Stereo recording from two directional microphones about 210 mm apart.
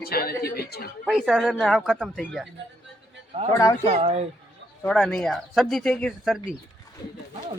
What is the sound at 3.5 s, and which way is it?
Speech, 10° left (ahead or behind).